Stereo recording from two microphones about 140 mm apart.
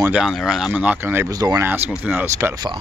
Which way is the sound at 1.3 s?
25° right (ahead or behind).